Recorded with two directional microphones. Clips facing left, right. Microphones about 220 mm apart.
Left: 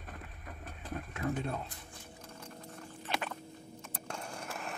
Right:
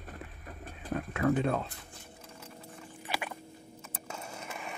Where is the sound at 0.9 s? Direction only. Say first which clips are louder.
Right 7 dB; 90° right.